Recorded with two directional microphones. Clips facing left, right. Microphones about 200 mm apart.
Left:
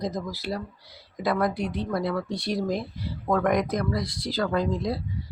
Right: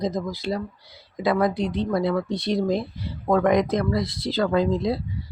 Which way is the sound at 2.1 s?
20° right (ahead or behind).